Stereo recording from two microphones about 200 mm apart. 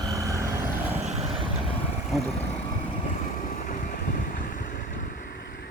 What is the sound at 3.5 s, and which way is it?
Vehicle, 40° left (ahead or behind).